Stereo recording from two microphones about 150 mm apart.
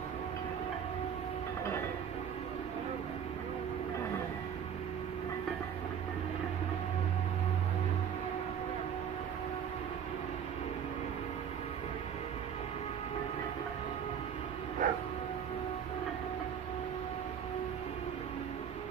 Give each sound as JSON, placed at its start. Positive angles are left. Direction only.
{"t": 14.8, "sound": "bow-wow", "side_deg": -65}